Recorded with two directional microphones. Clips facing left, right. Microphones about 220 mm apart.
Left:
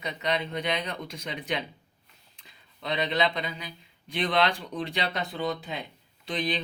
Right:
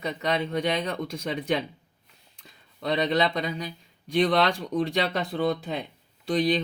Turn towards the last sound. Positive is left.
turn(degrees=-45)  # may be behind; listen again after turning